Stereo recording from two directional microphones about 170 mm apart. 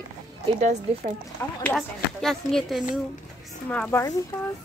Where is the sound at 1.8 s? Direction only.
Centre (ahead or behind).